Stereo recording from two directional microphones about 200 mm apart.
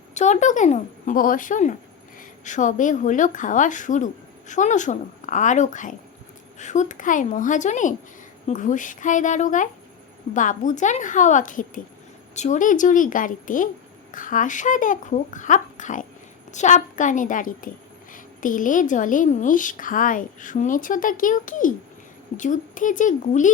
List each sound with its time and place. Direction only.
0.1 s a woman's voice: 35° left (ahead or behind)